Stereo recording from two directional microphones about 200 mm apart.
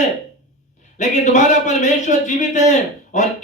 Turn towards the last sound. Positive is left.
turn(degrees=35)  # may be behind; listen again after turning